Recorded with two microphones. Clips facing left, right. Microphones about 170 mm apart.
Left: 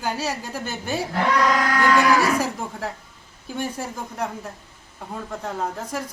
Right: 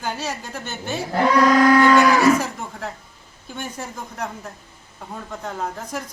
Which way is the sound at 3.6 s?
10° left (ahead or behind).